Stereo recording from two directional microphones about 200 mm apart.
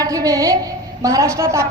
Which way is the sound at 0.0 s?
15° right (ahead or behind).